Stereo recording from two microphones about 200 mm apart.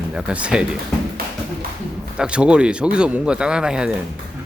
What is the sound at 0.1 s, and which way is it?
Speech, 5° right (ahead or behind).